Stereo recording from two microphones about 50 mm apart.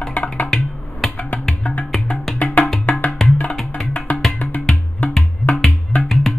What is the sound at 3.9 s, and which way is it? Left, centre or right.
Music, left.